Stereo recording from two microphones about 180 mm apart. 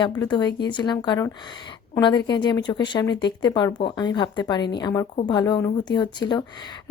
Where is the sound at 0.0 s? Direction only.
25° left (ahead or behind).